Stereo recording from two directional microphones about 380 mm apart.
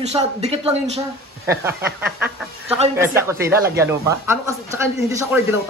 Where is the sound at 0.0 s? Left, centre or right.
Centre.